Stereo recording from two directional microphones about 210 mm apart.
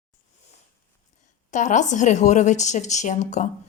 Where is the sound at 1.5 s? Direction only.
35° left (ahead or behind).